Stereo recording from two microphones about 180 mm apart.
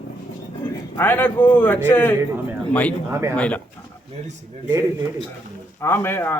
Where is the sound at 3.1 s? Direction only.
15° right (ahead or behind).